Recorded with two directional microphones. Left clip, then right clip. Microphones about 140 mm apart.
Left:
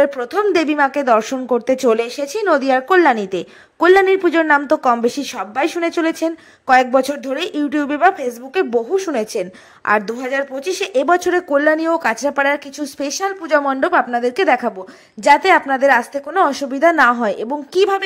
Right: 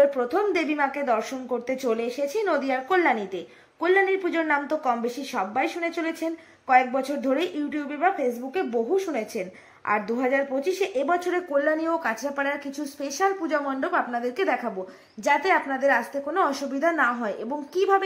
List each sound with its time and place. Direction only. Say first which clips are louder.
0.0 s a woman's voice: left 5 dB; 50° left (ahead or behind)
0.6 s a woman's voice: left 9 dB; 35° left (ahead or behind); by 2.2 s 55° left (ahead or behind)
2.2 s a woman's voice: left 9 dB; 40° left (ahead or behind)
7.0 s a woman's voice: left 7 dB; 50° left (ahead or behind)
7.3 s a woman's voice: left 8 dB; 35° left (ahead or behind)
11.5 s a woman's voice: left 8 dB; 50° left (ahead or behind)
14.1 s a woman's voice: left 10 dB; 40° left (ahead or behind)